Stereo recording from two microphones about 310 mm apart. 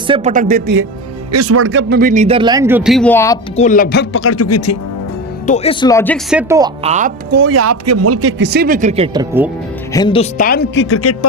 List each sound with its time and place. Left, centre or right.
0.1 s speech: right
1.3 s speech: right; by 3.3 s centre
3.5 s speech: left
5.5 s speech: centre
6.3 s speech: centre
6.8 s speech: right
7.5 s a man's voice: right; by 9.2 s centre
9.9 s speech: centre; by 11.3 s left